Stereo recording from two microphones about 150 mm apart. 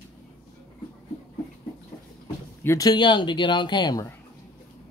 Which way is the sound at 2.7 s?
25° left (ahead or behind).